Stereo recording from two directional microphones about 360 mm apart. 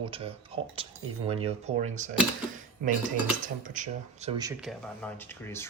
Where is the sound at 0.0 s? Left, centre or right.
Centre.